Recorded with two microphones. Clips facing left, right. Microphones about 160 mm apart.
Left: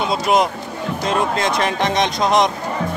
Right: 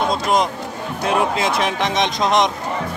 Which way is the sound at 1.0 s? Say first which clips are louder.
Right 1 dB; 5° right (ahead or behind).